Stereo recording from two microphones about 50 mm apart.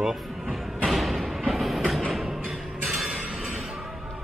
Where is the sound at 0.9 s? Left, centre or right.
Centre.